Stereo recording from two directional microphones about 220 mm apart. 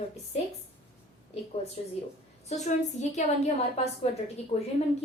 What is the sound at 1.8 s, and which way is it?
A woman's voice, 25° left (ahead or behind).